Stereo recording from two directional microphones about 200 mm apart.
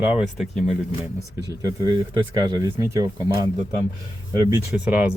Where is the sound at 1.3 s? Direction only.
15° right (ahead or behind).